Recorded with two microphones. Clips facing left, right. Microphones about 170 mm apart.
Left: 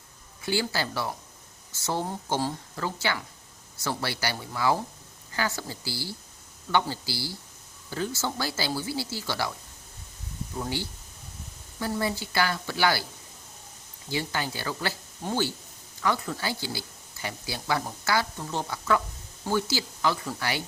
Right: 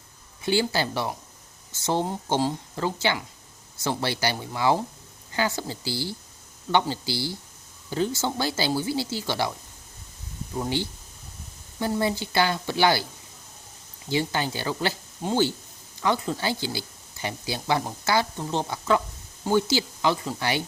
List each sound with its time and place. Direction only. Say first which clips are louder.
0.4 s speech: right 4 dB; 20° right (ahead or behind)
10.6 s speech: right 5 dB; 20° right (ahead or behind)
14.1 s speech: right 5 dB; 25° right (ahead or behind)